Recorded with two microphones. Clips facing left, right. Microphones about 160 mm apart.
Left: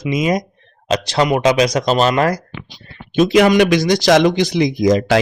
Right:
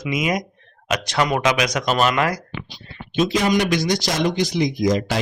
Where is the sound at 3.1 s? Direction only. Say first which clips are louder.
Left 7 dB; 65° left (ahead or behind).